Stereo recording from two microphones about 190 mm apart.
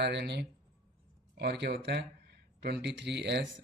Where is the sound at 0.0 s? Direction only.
60° right (ahead or behind).